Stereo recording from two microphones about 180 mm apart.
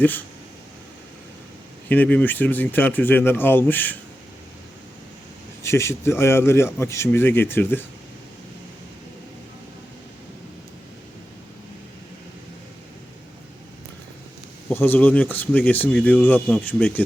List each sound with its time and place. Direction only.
1.9 s speech: 10° left (ahead or behind)
5.6 s speech: 15° left (ahead or behind)
14.7 s speech: 10° left (ahead or behind)